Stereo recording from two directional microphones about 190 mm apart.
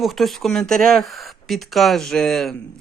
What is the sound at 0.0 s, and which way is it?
Speech, centre (ahead or behind).